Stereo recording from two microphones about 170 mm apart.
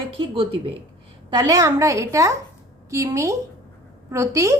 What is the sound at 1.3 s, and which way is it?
A woman's voice, 20° right (ahead or behind).